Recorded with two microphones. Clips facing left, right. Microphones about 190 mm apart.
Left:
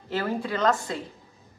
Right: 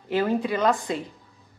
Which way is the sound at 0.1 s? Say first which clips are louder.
Right 4 dB; 20° right (ahead or behind).